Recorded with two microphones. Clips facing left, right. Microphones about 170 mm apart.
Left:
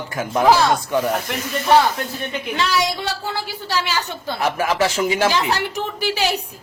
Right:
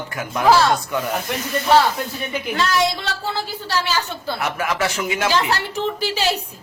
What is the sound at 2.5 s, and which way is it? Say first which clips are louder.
A woman's voice: right 1 dB; 10° left (ahead or behind).